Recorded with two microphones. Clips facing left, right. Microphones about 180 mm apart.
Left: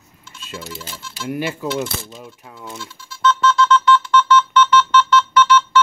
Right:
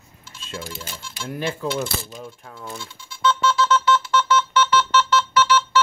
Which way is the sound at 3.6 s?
40° right (ahead or behind).